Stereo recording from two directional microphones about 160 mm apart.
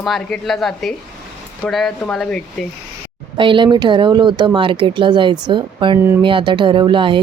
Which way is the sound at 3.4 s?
30° right (ahead or behind).